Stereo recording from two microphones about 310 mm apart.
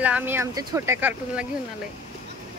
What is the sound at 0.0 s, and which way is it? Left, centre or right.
Speech, centre.